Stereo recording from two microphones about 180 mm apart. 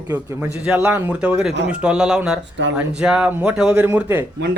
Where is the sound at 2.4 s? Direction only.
80° right.